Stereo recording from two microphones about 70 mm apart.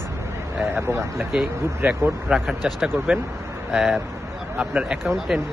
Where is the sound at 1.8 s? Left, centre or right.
Right.